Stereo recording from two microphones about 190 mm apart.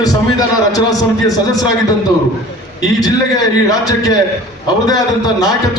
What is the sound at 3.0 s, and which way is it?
A man's voice, 20° left (ahead or behind).